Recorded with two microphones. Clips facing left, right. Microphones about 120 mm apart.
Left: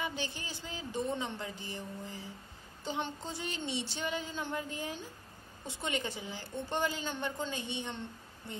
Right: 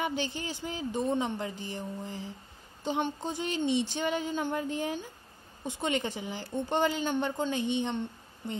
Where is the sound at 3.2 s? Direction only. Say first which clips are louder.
Right 7 dB; 15° right (ahead or behind).